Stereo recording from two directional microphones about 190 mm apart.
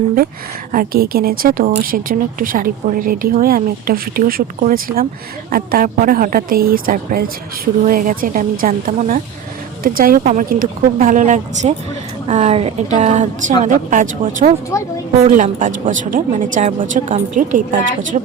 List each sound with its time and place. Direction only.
0.7 s a woman's voice: 50° right (ahead or behind)
10.2 s a woman's voice: 40° right (ahead or behind)
14.7 s speech: 15° left (ahead or behind)
15.2 s a woman's voice: 40° right (ahead or behind)